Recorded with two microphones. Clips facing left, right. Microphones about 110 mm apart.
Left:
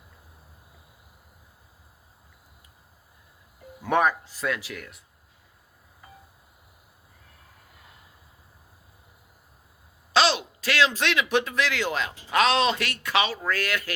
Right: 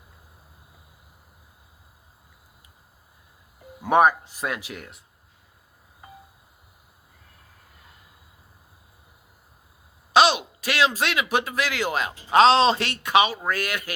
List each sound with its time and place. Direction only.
3.8 s speech: 15° right (ahead or behind)
10.1 s speech: 15° right (ahead or behind)
12.3 s speech: 30° right (ahead or behind); by 13.9 s 15° right (ahead or behind)